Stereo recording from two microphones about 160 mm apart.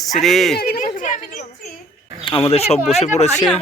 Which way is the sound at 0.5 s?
70° left (ahead or behind).